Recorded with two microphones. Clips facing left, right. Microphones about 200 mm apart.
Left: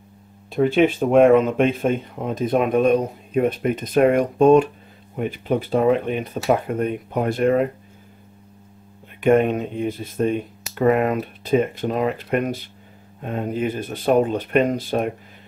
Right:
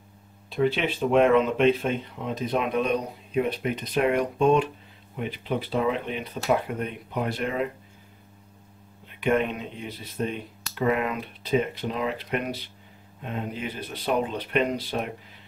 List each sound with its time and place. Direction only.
0.5 s speech: 50° left (ahead or behind)
9.2 s speech: 50° left (ahead or behind)